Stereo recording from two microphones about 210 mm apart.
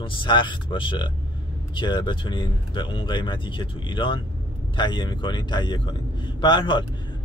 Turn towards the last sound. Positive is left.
turn(degrees=20)  # may be behind; listen again after turning